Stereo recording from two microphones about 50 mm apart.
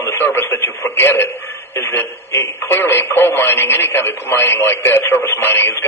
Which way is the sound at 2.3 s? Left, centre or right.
Left.